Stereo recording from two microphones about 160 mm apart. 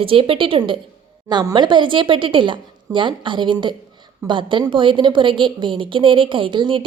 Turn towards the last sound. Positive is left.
turn(degrees=-30)  # may be behind; listen again after turning